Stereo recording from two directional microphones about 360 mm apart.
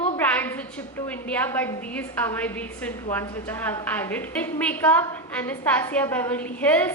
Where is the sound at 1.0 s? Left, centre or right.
Centre.